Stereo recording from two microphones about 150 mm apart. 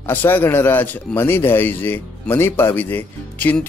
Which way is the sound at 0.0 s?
15° left (ahead or behind).